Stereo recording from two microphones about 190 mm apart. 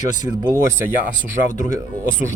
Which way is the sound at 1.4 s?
40° left (ahead or behind).